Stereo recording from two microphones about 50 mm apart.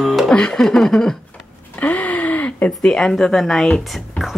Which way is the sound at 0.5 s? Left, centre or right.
Centre.